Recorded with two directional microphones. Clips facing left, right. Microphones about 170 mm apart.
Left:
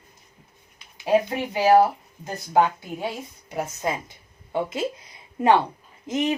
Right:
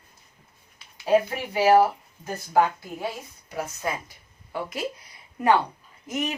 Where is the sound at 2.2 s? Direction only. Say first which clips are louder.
Left 1 dB; 20° left (ahead or behind).